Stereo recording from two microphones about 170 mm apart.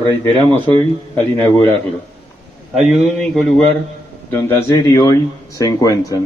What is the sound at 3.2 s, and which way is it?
Speech, centre (ahead or behind).